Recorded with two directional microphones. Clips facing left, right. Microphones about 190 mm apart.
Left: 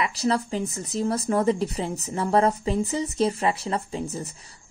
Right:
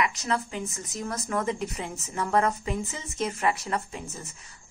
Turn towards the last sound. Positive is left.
turn(degrees=35)  # may be behind; listen again after turning